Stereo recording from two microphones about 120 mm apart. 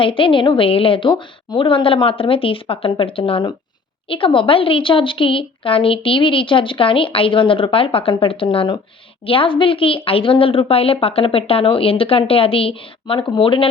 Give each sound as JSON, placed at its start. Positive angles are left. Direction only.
{"t": 0.0, "sound": "speech", "side_deg": 45}
{"t": 9.2, "sound": "speech", "side_deg": 50}